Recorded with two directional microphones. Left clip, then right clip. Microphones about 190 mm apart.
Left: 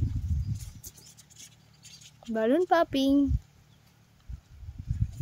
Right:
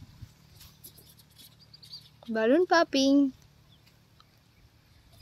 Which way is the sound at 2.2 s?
Centre (ahead or behind).